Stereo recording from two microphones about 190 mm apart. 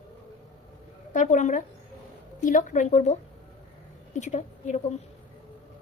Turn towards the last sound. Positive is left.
turn(degrees=40)  # may be behind; listen again after turning